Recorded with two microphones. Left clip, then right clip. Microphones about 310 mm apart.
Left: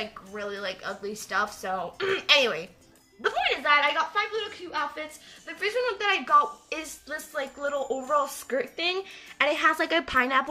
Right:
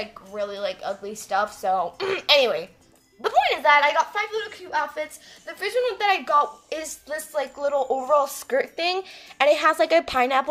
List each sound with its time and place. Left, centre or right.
0.0 s a woman's voice: centre